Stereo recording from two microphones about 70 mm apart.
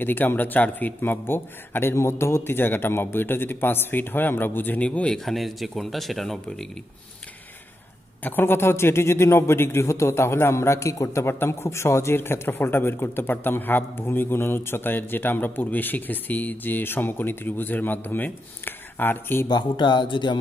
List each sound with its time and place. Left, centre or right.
0.0 s a man's voice: left
4.8 s speech: centre
5.2 s speech: centre
8.2 s a man's voice: left
11.2 s a man's voice: left
19.4 s speech: left